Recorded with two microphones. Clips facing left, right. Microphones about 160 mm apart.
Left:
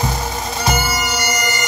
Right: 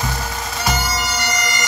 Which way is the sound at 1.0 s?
5° left (ahead or behind).